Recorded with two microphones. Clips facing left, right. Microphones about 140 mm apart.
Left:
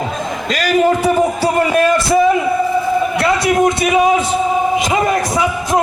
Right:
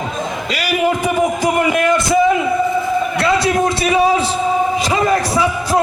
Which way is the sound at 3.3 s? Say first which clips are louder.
Left 3 dB; 30° right (ahead or behind).